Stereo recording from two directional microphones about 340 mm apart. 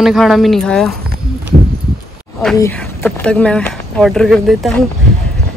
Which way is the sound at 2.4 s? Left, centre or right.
Centre.